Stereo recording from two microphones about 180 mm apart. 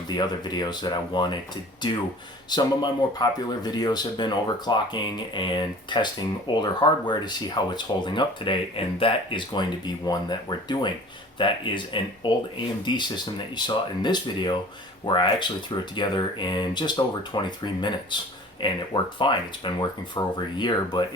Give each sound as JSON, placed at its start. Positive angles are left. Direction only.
{"t": 0.1, "sound": "speech", "side_deg": 25}